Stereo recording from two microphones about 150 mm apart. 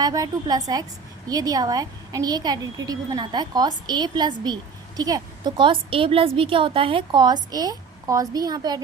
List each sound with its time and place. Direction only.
0.0 s a woman's voice: 25° right (ahead or behind)